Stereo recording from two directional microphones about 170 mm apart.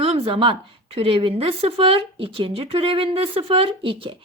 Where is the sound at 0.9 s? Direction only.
30° right (ahead or behind).